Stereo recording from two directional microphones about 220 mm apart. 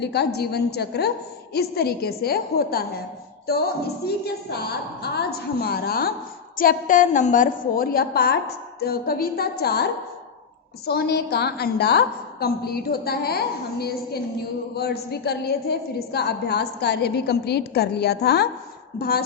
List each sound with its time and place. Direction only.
0.0 s a woman's voice: 50° left (ahead or behind)
4.0 s a woman's voice: 45° left (ahead or behind)
10.8 s a woman's voice: 45° left (ahead or behind)